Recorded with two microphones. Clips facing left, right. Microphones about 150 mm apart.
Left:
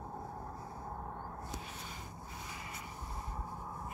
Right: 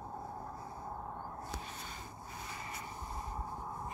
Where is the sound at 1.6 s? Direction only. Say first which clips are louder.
Right 1 dB; 5° left (ahead or behind).